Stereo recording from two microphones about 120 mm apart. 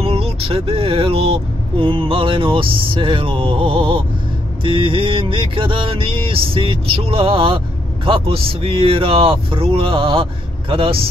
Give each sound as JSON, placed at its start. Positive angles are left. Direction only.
{"t": 0.0, "sound": "music", "side_deg": -55}